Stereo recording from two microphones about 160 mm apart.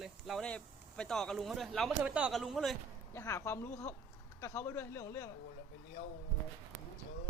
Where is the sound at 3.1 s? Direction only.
20° left (ahead or behind).